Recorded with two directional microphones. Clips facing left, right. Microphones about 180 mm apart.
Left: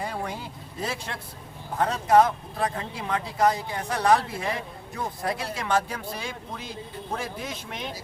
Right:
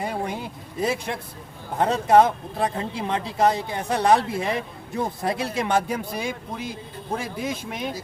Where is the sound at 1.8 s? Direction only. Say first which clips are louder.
Right 3 dB; 25° right (ahead or behind).